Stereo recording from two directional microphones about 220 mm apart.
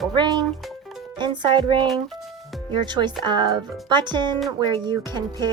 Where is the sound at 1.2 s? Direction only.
20° right (ahead or behind).